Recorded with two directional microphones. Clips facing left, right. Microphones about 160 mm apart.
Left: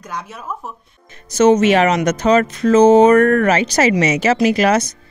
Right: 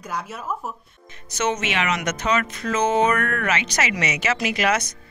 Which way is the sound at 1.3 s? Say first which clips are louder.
Left 13 dB; 35° left (ahead or behind).